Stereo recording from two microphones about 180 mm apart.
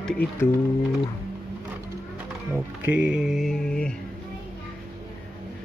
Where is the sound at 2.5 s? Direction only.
10° right (ahead or behind).